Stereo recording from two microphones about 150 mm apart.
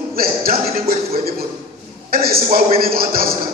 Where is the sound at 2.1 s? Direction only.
80° right.